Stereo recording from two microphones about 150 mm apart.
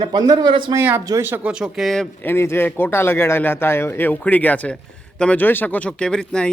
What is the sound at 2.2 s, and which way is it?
Speech, 15° left (ahead or behind).